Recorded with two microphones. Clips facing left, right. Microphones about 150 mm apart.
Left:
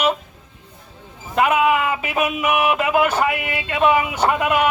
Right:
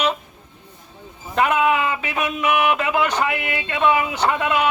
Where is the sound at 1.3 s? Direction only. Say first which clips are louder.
Left 1 dB; 5° left (ahead or behind).